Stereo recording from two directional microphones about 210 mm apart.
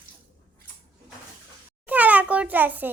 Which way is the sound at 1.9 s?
5° right (ahead or behind).